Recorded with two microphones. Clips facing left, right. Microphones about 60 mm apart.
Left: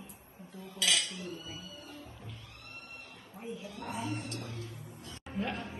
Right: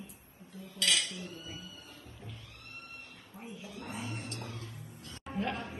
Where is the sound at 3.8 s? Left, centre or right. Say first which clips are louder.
Left 3 dB; left.